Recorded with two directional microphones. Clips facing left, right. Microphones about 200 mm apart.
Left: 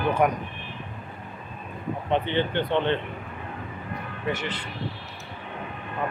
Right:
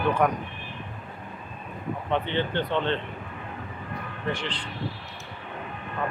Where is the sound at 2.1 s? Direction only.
15° left (ahead or behind).